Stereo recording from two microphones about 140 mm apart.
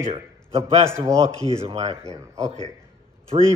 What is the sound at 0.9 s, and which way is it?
Music, 20° right (ahead or behind).